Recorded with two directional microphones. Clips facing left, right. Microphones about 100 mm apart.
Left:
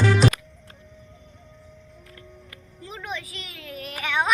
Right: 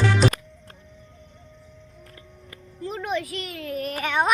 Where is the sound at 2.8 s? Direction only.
55° right (ahead or behind).